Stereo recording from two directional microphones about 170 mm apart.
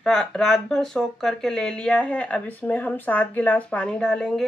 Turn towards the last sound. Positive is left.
turn(degrees=5)  # may be behind; listen again after turning